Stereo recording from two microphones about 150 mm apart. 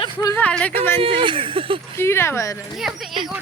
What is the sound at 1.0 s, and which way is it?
Speech, 35° right (ahead or behind).